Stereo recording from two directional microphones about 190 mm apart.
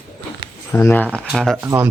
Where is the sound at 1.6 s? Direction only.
10° right (ahead or behind).